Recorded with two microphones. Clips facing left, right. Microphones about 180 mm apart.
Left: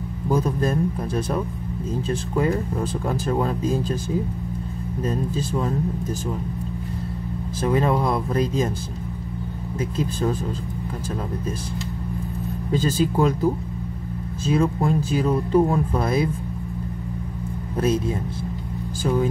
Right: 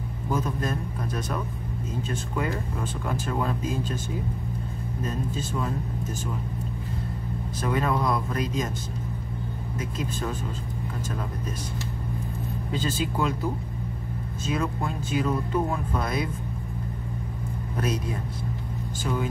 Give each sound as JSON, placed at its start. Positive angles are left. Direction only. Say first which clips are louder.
{"t": 0.3, "sound": "speech", "louder": "left 6 dB", "side_deg": 35}
{"t": 5.0, "sound": "speech", "louder": "left 6 dB", "side_deg": 35}
{"t": 7.6, "sound": "speech", "louder": "left 5 dB", "side_deg": 30}
{"t": 9.8, "sound": "speech", "louder": "left 7 dB", "side_deg": 30}
{"t": 12.7, "sound": "speech", "louder": "left 7 dB", "side_deg": 40}
{"t": 17.7, "sound": "speech", "louder": "left 7 dB", "side_deg": 25}